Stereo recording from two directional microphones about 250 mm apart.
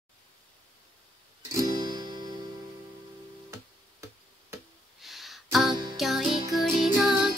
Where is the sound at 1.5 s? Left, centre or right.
Centre.